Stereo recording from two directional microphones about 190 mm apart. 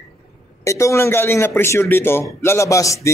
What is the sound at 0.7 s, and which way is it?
A man's voice, 15° left (ahead or behind).